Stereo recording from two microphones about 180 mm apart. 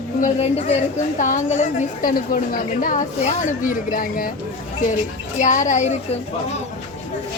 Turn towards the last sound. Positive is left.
turn(degrees=45)  # may be behind; listen again after turning